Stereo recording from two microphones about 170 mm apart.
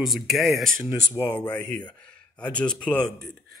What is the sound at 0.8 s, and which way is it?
Speech, 20° left (ahead or behind).